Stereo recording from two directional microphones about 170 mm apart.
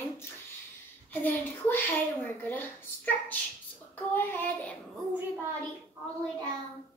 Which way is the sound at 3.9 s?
10° left (ahead or behind).